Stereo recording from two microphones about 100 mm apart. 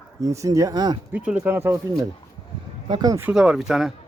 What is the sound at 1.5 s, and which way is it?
Speech, 25° right (ahead or behind).